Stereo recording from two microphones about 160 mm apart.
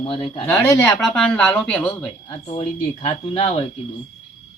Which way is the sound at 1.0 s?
5° left (ahead or behind).